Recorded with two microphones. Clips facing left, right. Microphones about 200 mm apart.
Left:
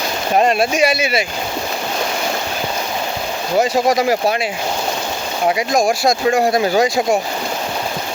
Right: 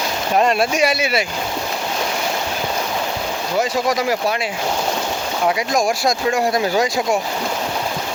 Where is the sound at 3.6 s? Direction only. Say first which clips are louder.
Left 4 dB; 30° left (ahead or behind).